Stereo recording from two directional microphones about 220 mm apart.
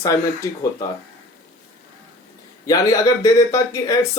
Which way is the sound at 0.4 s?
15° left (ahead or behind).